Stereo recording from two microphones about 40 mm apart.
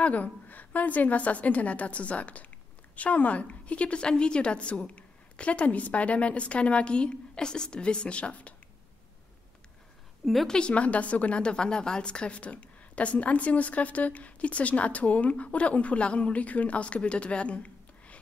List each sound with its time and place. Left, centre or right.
0.0 s a woman's voice: left
10.2 s a woman's voice: centre
10.7 s a woman's voice: left